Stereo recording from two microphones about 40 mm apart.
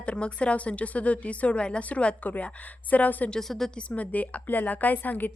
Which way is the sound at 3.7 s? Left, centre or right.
Left.